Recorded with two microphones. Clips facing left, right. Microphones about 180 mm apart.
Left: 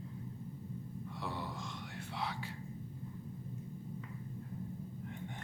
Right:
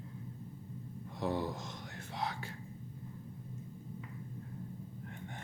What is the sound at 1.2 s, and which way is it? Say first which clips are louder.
Speech: right 8 dB; 45° right (ahead or behind).